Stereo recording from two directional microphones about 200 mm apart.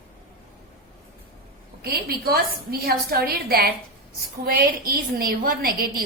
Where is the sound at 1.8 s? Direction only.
50° right (ahead or behind).